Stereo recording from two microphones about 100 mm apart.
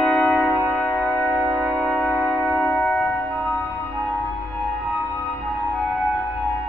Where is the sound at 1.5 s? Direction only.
10° left (ahead or behind).